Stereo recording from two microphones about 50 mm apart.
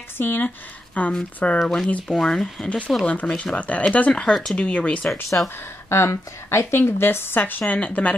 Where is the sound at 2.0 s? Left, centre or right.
Centre.